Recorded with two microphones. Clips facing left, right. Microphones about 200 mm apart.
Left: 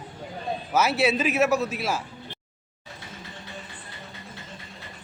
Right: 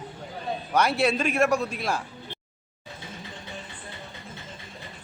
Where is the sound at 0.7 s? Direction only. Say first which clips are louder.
Left 1 dB; 5° left (ahead or behind).